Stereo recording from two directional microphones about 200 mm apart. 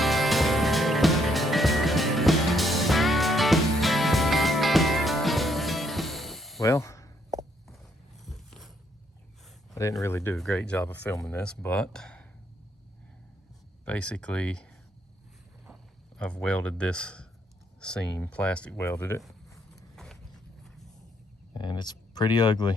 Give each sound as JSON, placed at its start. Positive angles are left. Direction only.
{"t": 0.0, "sound": "music", "side_deg": 0}
{"t": 6.6, "sound": "a sound", "side_deg": 15}
{"t": 9.7, "sound": "speech", "side_deg": 15}
{"t": 13.8, "sound": "speech", "side_deg": 5}
{"t": 19.7, "sound": "a sound", "side_deg": 0}
{"t": 21.5, "sound": "speech", "side_deg": 20}